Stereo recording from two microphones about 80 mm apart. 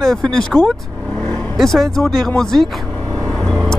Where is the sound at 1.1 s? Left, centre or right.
Left.